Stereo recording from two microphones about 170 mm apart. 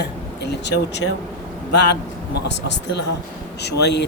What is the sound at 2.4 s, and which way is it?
Speech, 90° left.